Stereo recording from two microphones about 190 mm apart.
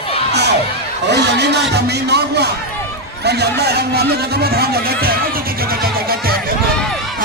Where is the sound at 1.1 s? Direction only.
65° right (ahead or behind).